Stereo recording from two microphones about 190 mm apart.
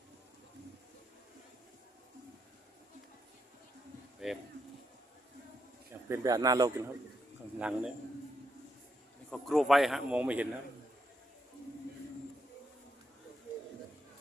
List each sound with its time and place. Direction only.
4.2 s a sound: centre (ahead or behind)
6.1 s speech: 20° right (ahead or behind)
7.6 s a man's voice: 5° right (ahead or behind)
9.3 s a man's voice: centre (ahead or behind)